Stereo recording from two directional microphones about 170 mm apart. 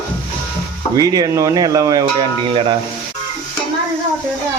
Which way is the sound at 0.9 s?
20° right (ahead or behind).